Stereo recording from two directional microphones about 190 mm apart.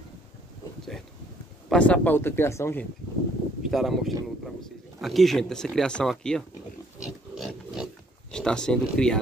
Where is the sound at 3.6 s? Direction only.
Centre (ahead or behind).